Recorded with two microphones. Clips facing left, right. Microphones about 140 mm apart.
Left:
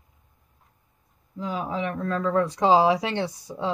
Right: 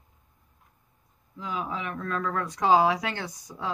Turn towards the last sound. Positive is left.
turn(degrees=30)  # may be behind; listen again after turning